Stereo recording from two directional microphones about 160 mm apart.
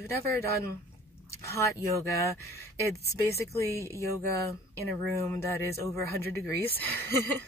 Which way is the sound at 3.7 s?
20° right (ahead or behind).